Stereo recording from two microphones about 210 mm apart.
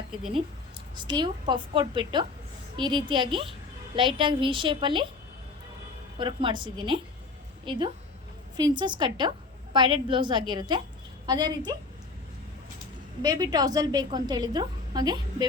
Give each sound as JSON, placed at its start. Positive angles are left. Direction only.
{"t": 0.9, "sound": "a woman's voice", "side_deg": -20}
{"t": 6.1, "sound": "a woman's voice", "side_deg": -25}
{"t": 13.2, "sound": "a woman's voice", "side_deg": -20}